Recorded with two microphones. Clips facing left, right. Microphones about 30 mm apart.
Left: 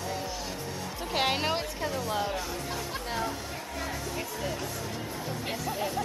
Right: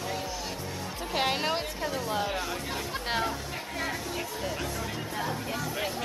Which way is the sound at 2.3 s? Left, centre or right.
Right.